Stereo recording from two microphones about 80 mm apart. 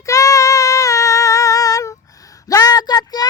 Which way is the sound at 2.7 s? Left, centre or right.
Left.